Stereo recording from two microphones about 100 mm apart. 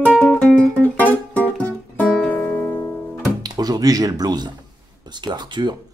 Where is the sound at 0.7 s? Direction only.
15° left (ahead or behind).